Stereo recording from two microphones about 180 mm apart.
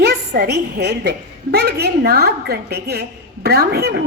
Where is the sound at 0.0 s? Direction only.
70° right (ahead or behind).